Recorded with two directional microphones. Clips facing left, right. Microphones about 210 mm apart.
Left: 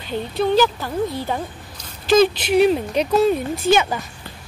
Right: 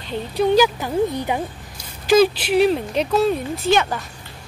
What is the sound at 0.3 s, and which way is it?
Speech, 10° right (ahead or behind).